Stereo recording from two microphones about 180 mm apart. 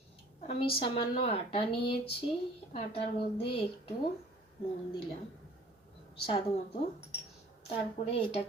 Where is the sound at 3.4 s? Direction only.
30° left (ahead or behind).